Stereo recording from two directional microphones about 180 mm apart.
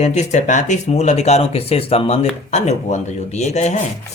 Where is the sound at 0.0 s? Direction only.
40° left (ahead or behind).